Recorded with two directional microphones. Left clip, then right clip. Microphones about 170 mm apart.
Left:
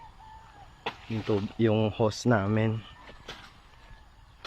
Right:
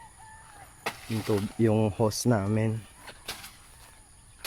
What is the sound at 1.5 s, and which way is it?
Speech, 40° right (ahead or behind).